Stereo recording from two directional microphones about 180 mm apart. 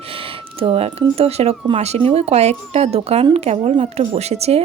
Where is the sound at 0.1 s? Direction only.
30° right (ahead or behind).